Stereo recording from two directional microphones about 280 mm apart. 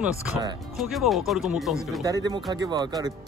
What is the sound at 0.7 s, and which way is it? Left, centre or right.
Speech, centre.